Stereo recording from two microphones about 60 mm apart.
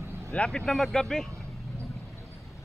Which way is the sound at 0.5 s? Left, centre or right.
Centre.